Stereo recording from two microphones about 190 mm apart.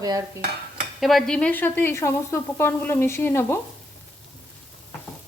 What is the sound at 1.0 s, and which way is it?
A woman's voice, centre (ahead or behind).